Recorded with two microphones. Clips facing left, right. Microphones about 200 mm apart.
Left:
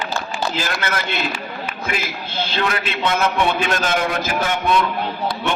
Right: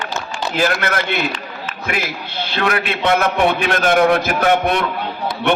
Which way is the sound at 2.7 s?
60° right (ahead or behind).